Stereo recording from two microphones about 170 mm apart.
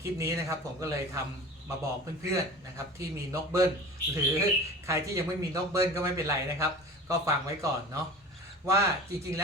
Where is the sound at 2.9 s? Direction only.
15° right (ahead or behind).